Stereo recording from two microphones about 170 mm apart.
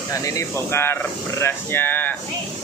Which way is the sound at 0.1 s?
20° left (ahead or behind).